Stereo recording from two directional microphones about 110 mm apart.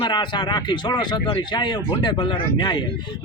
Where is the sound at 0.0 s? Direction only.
45° left (ahead or behind).